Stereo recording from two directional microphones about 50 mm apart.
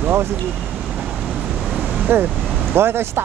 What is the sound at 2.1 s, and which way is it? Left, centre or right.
Speech, right.